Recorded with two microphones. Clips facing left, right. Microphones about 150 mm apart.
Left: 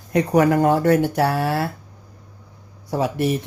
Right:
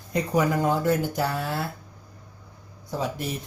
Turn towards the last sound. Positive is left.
turn(degrees=70)  # may be behind; listen again after turning